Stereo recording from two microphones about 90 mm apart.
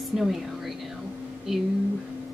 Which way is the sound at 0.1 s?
Centre (ahead or behind).